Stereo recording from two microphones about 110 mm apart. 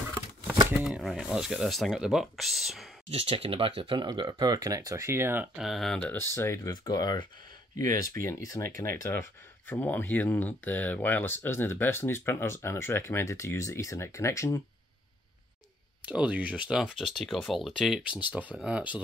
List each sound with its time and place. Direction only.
0.8 s speech: 5° right (ahead or behind)
3.1 s speech: 60° right (ahead or behind); by 5.6 s 20° right (ahead or behind)
5.6 s speech: centre (ahead or behind)
5.9 s speech: 15° left (ahead or behind)
6.3 s speech: 25° left (ahead or behind)
6.7 s speech: 40° left (ahead or behind)
16.1 s speech: 10° right (ahead or behind)
18.3 s speech: 15° right (ahead or behind)